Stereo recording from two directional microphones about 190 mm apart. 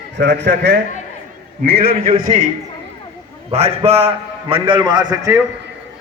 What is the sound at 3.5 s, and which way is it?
A man's voice, 35° right (ahead or behind).